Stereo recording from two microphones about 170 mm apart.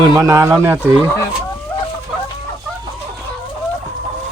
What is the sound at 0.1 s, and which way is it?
Speech, 20° right (ahead or behind).